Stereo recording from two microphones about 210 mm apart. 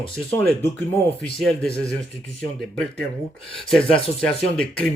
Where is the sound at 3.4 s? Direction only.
25° left (ahead or behind).